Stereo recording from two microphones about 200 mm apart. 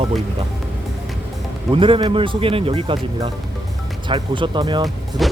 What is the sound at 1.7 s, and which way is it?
Speech, 25° right (ahead or behind).